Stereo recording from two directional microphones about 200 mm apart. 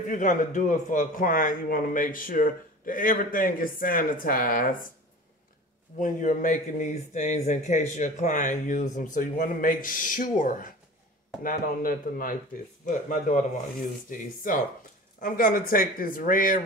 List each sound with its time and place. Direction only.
0.1 s speech: 40° left (ahead or behind)
5.9 s a man's voice: 40° left (ahead or behind)